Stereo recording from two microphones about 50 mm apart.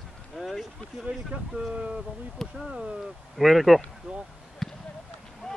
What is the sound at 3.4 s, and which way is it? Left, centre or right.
Speech, centre.